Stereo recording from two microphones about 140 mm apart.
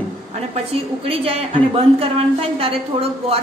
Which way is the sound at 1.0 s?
45° right (ahead or behind).